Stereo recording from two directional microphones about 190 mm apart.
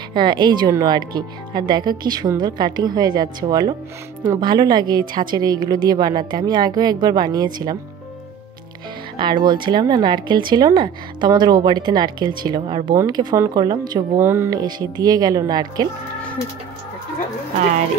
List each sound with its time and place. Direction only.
0.1 s speech: 25° right (ahead or behind)
9.1 s speech: 25° right (ahead or behind)